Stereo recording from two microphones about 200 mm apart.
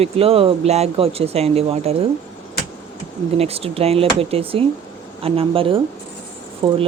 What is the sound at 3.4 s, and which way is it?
Speech, 30° right (ahead or behind).